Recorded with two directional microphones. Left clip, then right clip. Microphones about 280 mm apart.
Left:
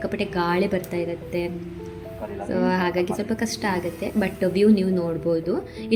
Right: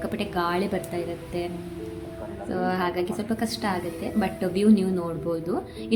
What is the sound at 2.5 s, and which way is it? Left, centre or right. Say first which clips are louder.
A woman's voice: left 3 dB; centre.